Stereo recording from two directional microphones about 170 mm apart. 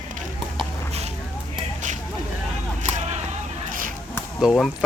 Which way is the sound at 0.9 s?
40° right (ahead or behind).